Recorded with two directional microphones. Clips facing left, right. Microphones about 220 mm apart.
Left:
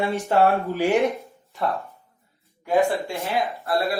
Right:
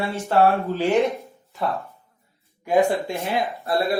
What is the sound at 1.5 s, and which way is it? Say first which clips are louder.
Speech: even; centre (ahead or behind).